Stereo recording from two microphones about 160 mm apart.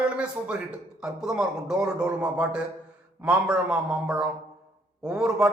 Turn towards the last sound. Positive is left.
turn(degrees=-5)  # may be behind; listen again after turning